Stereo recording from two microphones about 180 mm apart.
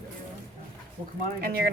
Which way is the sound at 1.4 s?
55° right (ahead or behind).